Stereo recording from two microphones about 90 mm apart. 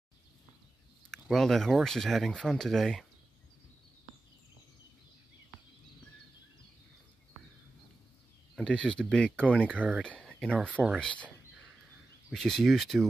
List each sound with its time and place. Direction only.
1.3 s speech: 5° left (ahead or behind)
8.5 s speech: 10° left (ahead or behind)
9.6 s speech: 15° right (ahead or behind)
10.0 s speech: 15° left (ahead or behind)
10.7 s speech: 15° right (ahead or behind)
12.3 s speech: 5° left (ahead or behind)